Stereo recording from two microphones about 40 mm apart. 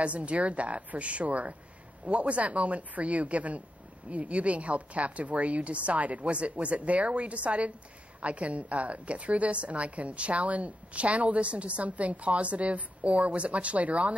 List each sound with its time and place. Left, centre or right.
0.0 s a woman's voice: right